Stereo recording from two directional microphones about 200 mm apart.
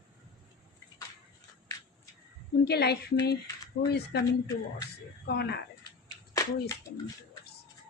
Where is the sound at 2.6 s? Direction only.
55° left (ahead or behind).